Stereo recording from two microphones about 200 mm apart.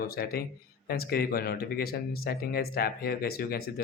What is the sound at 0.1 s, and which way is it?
Speech, 50° left (ahead or behind).